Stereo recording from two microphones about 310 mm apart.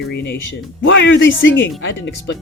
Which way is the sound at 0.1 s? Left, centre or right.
Left.